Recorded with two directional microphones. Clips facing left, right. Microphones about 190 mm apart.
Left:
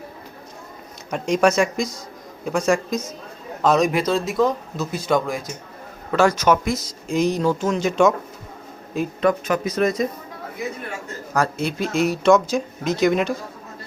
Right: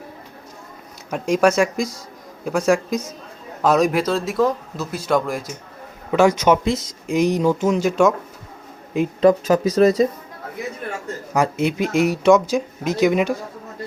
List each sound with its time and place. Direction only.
1.1 s speech: 5° right (ahead or behind)
9.2 s speech: 35° right (ahead or behind)
11.3 s speech: 20° right (ahead or behind)